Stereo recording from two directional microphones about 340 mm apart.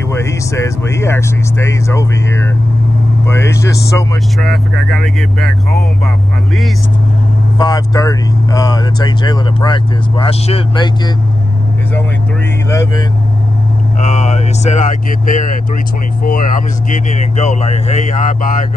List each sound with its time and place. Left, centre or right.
0.1 s speech: centre
7.5 s speech: centre
12.6 s speech: centre
14.0 s speech: centre